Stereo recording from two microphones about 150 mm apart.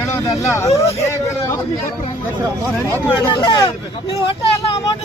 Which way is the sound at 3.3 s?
30° left (ahead or behind).